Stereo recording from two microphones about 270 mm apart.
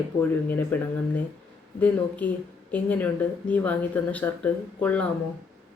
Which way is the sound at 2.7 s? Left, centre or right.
Centre.